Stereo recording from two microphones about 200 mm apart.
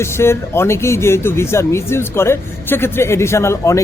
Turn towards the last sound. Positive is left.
turn(degrees=15)  # may be behind; listen again after turning